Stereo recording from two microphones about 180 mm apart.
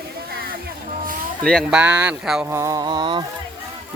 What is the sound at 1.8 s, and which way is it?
Speech, 5° right (ahead or behind).